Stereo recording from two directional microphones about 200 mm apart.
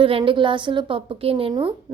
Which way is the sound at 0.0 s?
25° right (ahead or behind).